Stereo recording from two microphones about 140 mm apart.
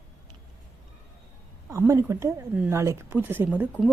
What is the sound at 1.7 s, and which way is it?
A woman's voice, 20° right (ahead or behind).